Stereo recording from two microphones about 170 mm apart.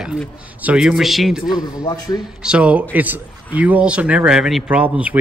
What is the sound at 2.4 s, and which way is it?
A man's voice, 5° right (ahead or behind).